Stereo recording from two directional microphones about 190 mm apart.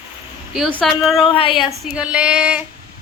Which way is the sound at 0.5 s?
Centre (ahead or behind).